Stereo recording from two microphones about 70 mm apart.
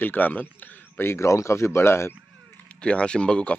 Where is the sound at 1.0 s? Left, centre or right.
Left.